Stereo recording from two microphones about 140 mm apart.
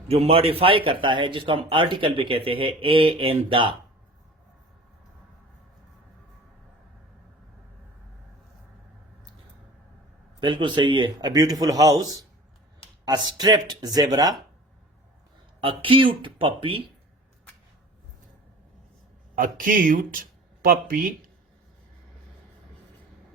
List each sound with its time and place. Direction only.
0.1 s a man's voice: 45° right (ahead or behind)
10.4 s a man's voice: 35° right (ahead or behind)
15.6 s a man's voice: 40° right (ahead or behind)
19.4 s speech: 80° right
20.7 s speech: 90° right